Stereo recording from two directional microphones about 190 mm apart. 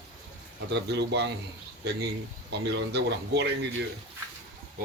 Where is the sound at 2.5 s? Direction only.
65° right (ahead or behind).